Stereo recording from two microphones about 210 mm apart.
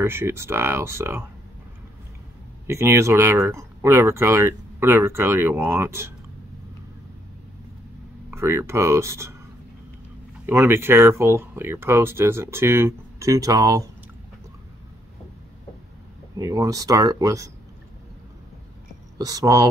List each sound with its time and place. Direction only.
0.0 s speech: 10° right (ahead or behind)
2.6 s speech: 10° right (ahead or behind)
8.3 s speech: 10° right (ahead or behind)
10.4 s speech: 10° right (ahead or behind)
16.3 s speech: 15° right (ahead or behind)
19.1 s speech: 15° right (ahead or behind)